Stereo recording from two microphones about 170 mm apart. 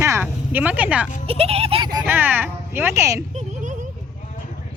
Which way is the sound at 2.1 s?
10° right (ahead or behind).